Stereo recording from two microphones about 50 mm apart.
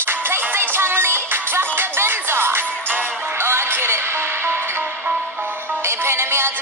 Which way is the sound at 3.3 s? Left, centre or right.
Right.